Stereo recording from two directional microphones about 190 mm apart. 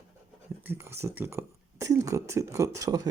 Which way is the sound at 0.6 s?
10° right (ahead or behind).